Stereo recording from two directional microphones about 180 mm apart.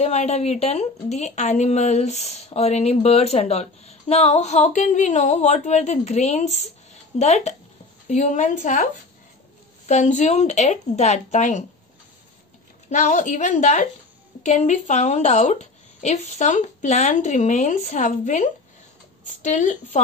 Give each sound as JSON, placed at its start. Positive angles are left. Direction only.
{"t": 0.0, "sound": "a woman's voice", "side_deg": 40}
{"t": 9.8, "sound": "speech", "side_deg": 40}
{"t": 12.9, "sound": "a woman's voice", "side_deg": 40}